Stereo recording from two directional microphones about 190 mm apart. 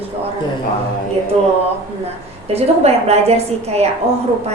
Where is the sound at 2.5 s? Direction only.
35° right (ahead or behind).